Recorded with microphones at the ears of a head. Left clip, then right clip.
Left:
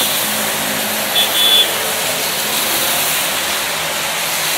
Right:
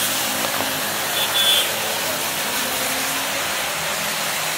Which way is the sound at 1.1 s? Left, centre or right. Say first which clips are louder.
Left 6 dB; left.